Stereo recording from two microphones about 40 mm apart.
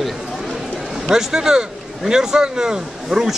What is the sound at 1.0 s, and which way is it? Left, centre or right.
Speech, centre.